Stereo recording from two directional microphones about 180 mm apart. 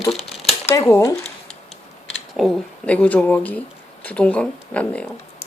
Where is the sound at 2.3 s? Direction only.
5° left (ahead or behind).